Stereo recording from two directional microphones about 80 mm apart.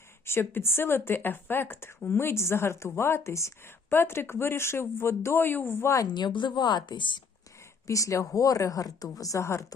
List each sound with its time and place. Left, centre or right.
0.3 s speech: left
6.1 s a woman's voice: left
7.9 s speech: left